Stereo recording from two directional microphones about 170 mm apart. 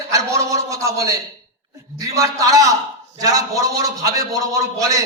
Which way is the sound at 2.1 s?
20° right (ahead or behind).